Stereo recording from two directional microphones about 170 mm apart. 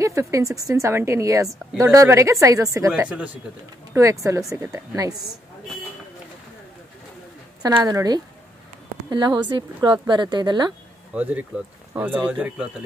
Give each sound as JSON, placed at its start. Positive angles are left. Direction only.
{"t": 0.0, "sound": "a woman's voice", "side_deg": -20}
{"t": 2.9, "sound": "speech", "side_deg": -5}
{"t": 3.9, "sound": "a woman's voice", "side_deg": -20}
{"t": 7.6, "sound": "a woman's voice", "side_deg": -20}
{"t": 11.1, "sound": "speech", "side_deg": -10}